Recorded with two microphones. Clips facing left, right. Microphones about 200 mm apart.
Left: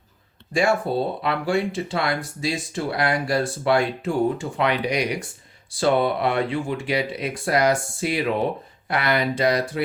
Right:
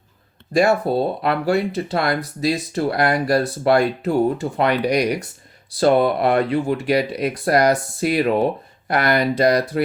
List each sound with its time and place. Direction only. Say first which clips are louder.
0.5 s speech: right 4 dB; 40° right (ahead or behind)